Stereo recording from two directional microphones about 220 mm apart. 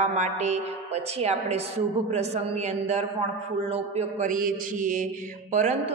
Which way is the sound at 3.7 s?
30° right (ahead or behind).